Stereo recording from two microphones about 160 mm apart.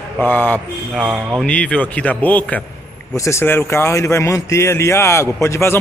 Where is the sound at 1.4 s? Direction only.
5° left (ahead or behind).